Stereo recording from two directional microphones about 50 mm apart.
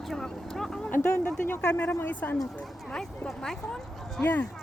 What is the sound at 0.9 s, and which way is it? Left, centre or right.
Speech, left.